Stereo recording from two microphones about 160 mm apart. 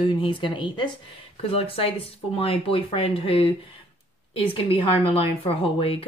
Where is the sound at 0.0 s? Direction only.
30° left (ahead or behind).